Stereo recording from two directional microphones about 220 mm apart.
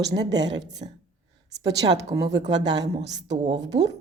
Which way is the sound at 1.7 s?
50° right (ahead or behind).